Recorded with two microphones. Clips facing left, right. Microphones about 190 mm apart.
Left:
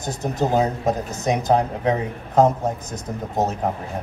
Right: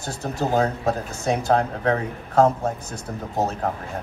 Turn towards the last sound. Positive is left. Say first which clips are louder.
# left 2 dB
turn(degrees=20)  # may be behind; listen again after turning